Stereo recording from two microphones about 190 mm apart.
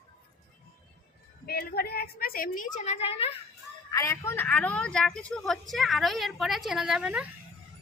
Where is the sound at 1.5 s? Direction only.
55° left (ahead or behind).